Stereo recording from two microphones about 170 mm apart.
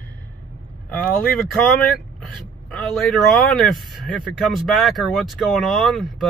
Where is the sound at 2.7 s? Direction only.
Centre (ahead or behind).